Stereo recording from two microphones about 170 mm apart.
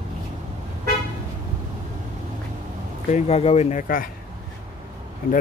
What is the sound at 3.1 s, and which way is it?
Speech, 40° left (ahead or behind).